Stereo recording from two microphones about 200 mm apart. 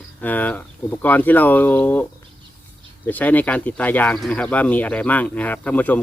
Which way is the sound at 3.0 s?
10° left (ahead or behind).